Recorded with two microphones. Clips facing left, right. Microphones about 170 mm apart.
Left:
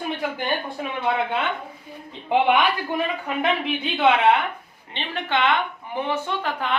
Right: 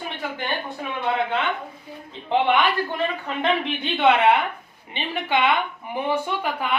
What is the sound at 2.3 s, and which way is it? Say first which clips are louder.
A woman's voice: left 1 dB; 10° left (ahead or behind).